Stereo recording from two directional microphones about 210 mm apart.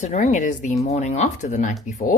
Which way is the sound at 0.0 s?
35° left (ahead or behind).